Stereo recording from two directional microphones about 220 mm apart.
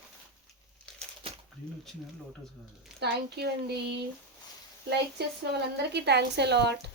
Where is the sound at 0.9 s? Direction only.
5° left (ahead or behind).